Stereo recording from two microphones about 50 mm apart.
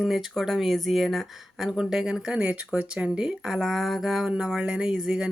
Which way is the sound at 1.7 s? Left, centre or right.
Centre.